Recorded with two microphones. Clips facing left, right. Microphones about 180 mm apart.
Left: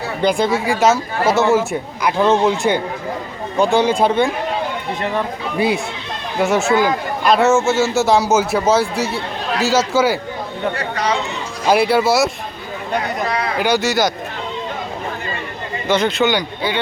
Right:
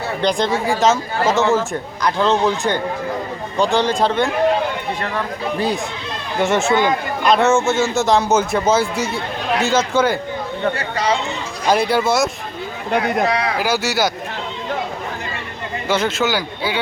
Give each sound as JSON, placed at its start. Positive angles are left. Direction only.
{"t": 0.2, "sound": "a man's voice", "side_deg": 5}
{"t": 10.8, "sound": "speech", "side_deg": -30}
{"t": 11.7, "sound": "a man's voice", "side_deg": 5}
{"t": 13.6, "sound": "a man's voice", "side_deg": -5}
{"t": 15.9, "sound": "a man's voice", "side_deg": -5}